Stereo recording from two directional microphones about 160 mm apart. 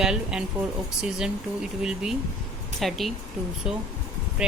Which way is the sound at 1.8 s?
5° right (ahead or behind).